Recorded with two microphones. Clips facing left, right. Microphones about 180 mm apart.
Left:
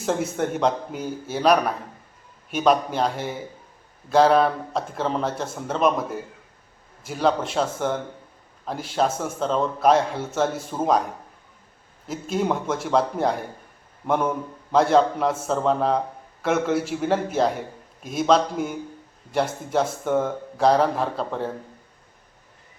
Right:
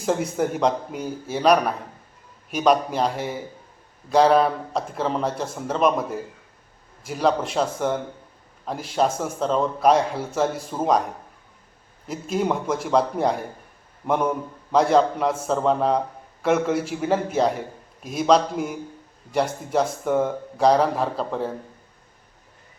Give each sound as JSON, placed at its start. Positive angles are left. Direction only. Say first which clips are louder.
{"t": 0.0, "sound": "a man's voice", "louder": "right 1 dB", "side_deg": 0}